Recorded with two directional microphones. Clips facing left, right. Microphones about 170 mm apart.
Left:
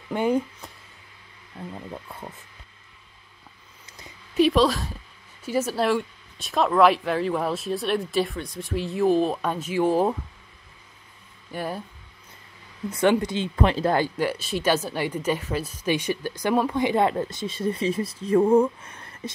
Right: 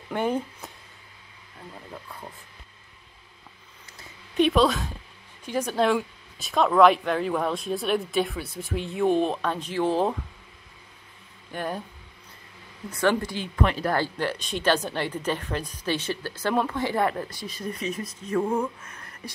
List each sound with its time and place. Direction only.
0.1 s speech: 10° left (ahead or behind)
4.4 s a woman's voice: centre (ahead or behind)
11.5 s speech: 5° left (ahead or behind)
12.9 s speech: 20° left (ahead or behind)
13.9 s speech: 10° left (ahead or behind); by 19.3 s 25° left (ahead or behind)